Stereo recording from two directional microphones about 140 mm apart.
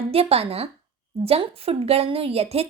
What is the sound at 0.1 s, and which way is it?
A woman's voice, 45° right (ahead or behind).